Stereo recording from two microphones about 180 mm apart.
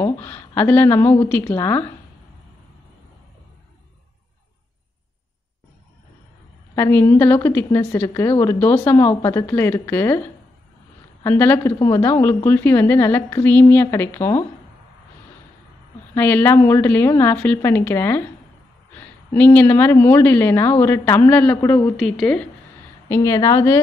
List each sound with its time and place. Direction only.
0.0 s a woman's voice: 10° left (ahead or behind)
6.7 s a woman's voice: 10° left (ahead or behind)
11.2 s a woman's voice: 10° left (ahead or behind)
16.2 s a woman's voice: 10° left (ahead or behind)
21.9 s speech: centre (ahead or behind)
23.0 s a woman's voice: 15° left (ahead or behind)